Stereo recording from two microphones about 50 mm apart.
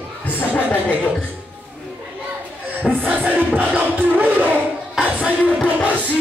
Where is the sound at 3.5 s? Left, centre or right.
Right.